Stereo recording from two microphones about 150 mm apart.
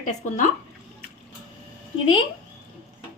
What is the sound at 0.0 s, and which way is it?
Speech, 55° left (ahead or behind).